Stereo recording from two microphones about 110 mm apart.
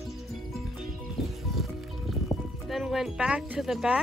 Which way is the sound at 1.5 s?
Centre (ahead or behind).